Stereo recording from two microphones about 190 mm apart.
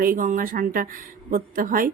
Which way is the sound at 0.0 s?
45° right (ahead or behind).